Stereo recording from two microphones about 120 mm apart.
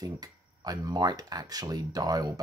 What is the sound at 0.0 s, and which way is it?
Speech, 30° right (ahead or behind).